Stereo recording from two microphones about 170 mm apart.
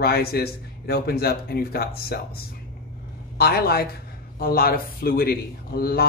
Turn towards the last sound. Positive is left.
turn(degrees=65)  # may be behind; listen again after turning